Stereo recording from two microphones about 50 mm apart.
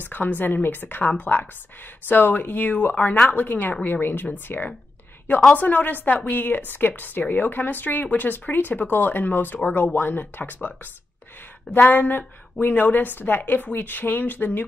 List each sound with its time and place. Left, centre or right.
0.0 s a woman's voice: left
11.9 s speech: left